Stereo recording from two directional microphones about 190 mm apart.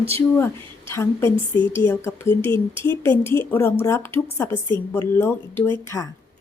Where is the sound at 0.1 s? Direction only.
10° left (ahead or behind).